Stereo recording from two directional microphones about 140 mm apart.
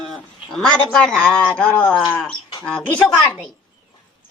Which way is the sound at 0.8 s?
5° left (ahead or behind).